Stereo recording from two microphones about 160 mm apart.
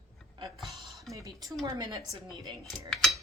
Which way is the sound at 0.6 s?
Centre (ahead or behind).